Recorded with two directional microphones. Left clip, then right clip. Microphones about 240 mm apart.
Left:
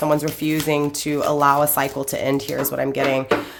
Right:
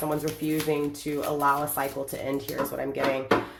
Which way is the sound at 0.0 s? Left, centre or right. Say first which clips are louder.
Left 9 dB; left.